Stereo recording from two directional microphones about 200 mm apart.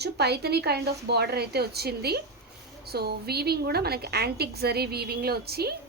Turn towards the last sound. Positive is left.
turn(degrees=-50)  # may be behind; listen again after turning